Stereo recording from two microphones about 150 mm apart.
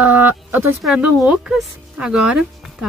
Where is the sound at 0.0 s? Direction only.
10° right (ahead or behind).